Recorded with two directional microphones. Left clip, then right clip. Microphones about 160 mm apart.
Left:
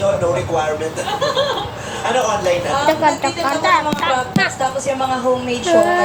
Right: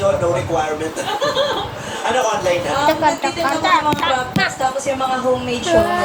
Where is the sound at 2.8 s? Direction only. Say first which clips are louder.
Left 1 dB; 15° left (ahead or behind).